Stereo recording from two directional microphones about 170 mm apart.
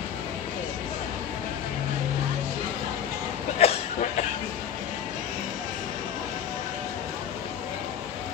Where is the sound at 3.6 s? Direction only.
35° left (ahead or behind).